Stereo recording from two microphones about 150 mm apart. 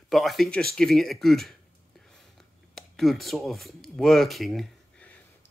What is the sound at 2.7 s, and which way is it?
Speech, centre (ahead or behind).